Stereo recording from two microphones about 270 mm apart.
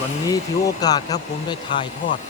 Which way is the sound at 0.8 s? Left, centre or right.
Centre.